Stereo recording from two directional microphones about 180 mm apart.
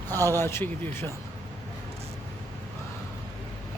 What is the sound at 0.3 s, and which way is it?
Speech, 15° left (ahead or behind).